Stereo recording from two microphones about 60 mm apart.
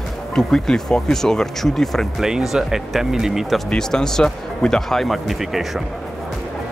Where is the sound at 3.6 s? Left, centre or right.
Centre.